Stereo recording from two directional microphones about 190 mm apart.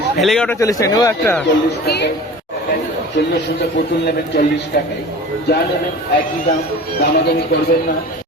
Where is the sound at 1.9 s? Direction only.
60° left (ahead or behind).